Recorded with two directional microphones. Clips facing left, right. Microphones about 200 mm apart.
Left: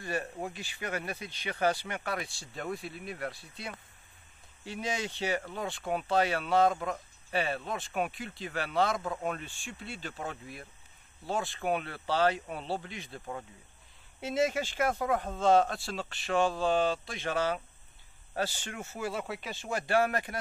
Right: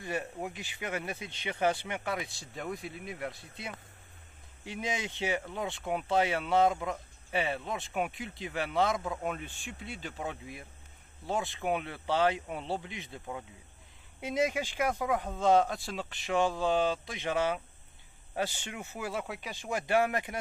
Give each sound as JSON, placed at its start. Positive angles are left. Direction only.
{"t": 0.0, "sound": "speech", "side_deg": -20}
{"t": 8.9, "sound": "speech", "side_deg": 0}
{"t": 9.3, "sound": "speech", "side_deg": -15}
{"t": 14.2, "sound": "speech", "side_deg": -15}
{"t": 15.3, "sound": "speech", "side_deg": -15}